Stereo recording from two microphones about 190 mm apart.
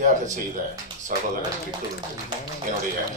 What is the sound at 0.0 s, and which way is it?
Speech, 45° right (ahead or behind).